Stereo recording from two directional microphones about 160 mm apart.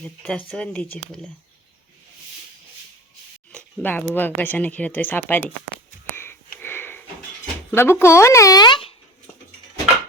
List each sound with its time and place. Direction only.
0.0 s speech: 5° left (ahead or behind)
3.5 s a sound: 10° left (ahead or behind)
4.1 s speech: 10° left (ahead or behind)
6.1 s sniff: 15° left (ahead or behind)
7.7 s speech: 15° left (ahead or behind)